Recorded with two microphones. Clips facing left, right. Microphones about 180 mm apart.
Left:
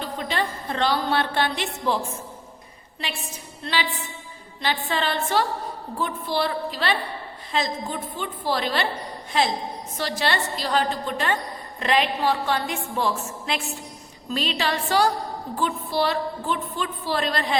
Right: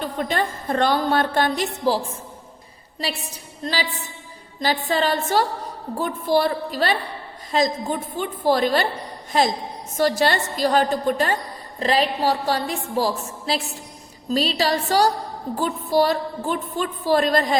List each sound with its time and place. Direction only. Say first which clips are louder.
0.0 s a woman's voice: right 3 dB; 50° right (ahead or behind)